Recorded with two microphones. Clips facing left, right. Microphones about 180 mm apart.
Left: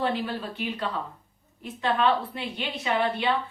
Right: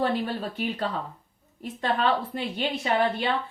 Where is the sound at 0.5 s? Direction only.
45° right (ahead or behind).